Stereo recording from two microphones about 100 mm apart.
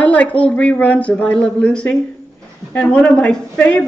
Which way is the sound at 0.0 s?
15° left (ahead or behind).